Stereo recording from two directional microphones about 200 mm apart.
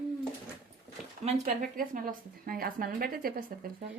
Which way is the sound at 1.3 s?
40° right (ahead or behind).